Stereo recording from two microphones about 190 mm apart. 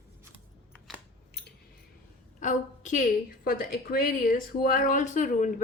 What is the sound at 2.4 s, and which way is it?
A woman's voice, 40° left (ahead or behind).